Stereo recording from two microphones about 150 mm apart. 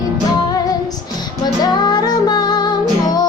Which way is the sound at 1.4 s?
25° left (ahead or behind).